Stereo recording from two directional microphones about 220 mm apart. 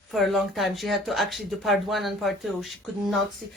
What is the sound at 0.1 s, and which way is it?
Speech, centre (ahead or behind).